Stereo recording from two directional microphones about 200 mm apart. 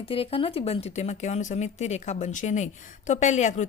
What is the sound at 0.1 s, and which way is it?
Speech, 25° left (ahead or behind).